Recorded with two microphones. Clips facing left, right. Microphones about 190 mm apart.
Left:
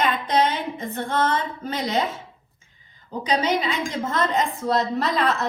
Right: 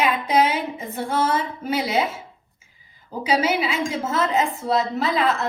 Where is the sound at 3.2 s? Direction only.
5° right (ahead or behind).